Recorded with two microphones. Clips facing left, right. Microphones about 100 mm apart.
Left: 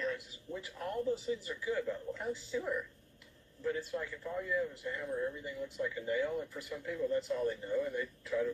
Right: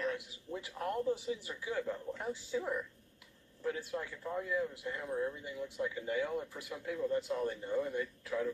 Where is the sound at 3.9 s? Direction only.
25° right (ahead or behind).